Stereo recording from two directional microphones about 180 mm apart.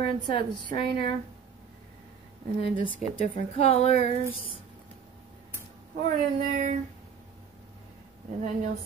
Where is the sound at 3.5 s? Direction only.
35° left (ahead or behind).